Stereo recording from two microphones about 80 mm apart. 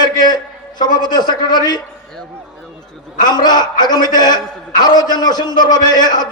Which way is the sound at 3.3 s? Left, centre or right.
Left.